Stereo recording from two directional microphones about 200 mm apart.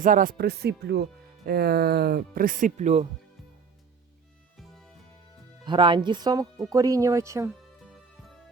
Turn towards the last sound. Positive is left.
turn(degrees=-15)  # may be behind; listen again after turning